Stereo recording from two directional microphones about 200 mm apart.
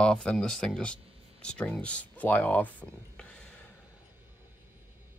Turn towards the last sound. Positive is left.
turn(degrees=5)  # may be behind; listen again after turning